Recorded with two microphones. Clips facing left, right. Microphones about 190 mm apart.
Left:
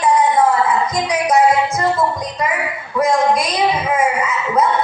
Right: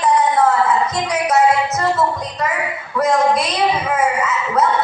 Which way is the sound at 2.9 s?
10° left (ahead or behind).